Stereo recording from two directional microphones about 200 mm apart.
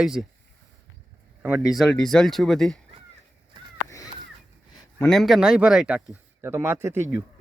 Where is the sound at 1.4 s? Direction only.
5° right (ahead or behind).